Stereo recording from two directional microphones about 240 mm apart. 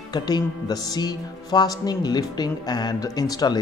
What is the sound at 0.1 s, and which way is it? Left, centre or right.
Speech, centre.